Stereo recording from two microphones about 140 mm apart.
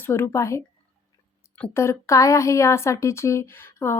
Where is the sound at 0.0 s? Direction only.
15° left (ahead or behind).